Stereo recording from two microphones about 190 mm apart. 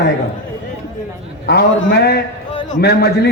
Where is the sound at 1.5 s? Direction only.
55° left (ahead or behind).